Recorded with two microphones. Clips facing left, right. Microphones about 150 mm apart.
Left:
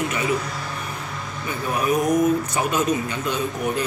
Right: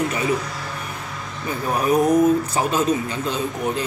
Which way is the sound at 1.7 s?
35° right (ahead or behind).